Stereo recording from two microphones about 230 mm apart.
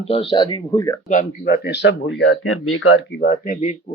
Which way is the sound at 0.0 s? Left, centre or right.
Left.